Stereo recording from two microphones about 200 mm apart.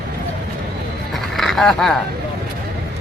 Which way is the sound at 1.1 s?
Centre (ahead or behind).